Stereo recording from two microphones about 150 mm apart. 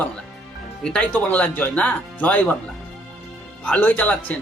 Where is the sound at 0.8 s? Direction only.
5° left (ahead or behind).